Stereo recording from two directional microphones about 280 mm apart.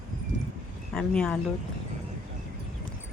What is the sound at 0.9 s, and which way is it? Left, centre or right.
Speech, centre.